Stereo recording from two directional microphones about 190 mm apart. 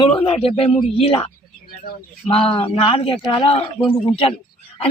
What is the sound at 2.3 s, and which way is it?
Speech, 30° left (ahead or behind).